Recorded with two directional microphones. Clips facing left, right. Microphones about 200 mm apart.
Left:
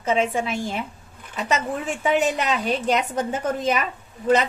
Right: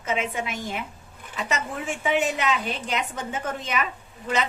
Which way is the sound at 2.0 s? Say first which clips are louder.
Left 3 dB; 40° left (ahead or behind).